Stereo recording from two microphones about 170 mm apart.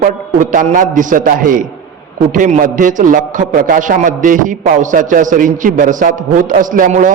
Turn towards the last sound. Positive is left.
turn(degrees=-50)  # may be behind; listen again after turning